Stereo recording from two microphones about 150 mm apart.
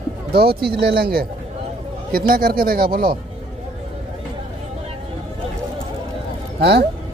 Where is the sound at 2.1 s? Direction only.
75° right (ahead or behind).